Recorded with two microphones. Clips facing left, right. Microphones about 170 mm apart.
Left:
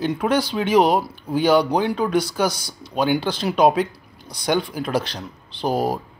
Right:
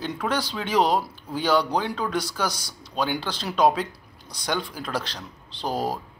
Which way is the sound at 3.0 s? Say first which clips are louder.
Left 7 dB; 15° left (ahead or behind).